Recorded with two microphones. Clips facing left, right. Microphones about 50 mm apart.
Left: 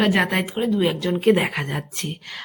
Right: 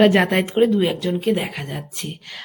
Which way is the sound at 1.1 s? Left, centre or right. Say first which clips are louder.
Left 3 dB; left.